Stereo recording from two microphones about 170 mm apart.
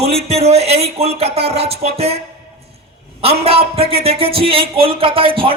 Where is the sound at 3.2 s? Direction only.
35° right (ahead or behind).